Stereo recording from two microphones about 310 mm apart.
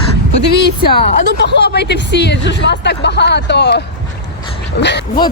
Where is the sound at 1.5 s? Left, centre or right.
Left.